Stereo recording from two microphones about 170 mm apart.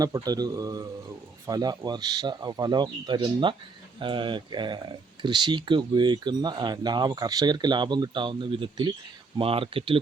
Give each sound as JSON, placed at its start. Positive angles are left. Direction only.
{"t": 0.0, "sound": "speech", "side_deg": -20}